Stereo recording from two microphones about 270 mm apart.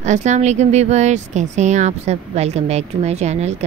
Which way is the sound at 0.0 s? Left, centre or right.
Right.